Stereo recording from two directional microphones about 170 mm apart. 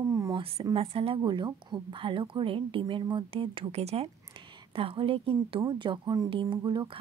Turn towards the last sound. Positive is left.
turn(degrees=-30)  # may be behind; listen again after turning